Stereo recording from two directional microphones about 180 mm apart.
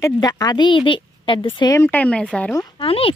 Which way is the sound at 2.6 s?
30° left (ahead or behind).